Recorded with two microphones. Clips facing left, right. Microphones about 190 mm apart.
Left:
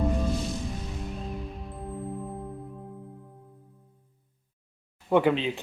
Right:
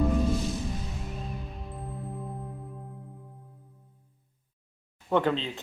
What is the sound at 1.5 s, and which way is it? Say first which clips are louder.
Music: left 3 dB; centre (ahead or behind).